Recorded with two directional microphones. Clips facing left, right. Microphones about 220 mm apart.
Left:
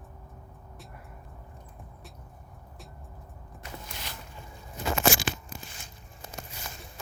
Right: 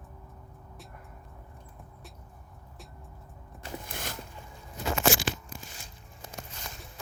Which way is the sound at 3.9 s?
50° right (ahead or behind).